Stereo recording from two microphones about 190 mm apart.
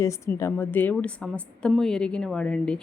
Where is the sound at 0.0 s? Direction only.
15° left (ahead or behind).